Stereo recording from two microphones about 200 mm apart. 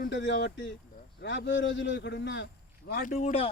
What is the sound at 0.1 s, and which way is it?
A man's voice, 60° left (ahead or behind).